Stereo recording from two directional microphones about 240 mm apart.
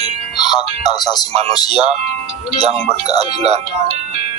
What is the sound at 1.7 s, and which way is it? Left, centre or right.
Speech, right.